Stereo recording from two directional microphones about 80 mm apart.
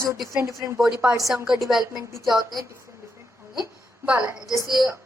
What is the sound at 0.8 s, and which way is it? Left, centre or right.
Speech, centre.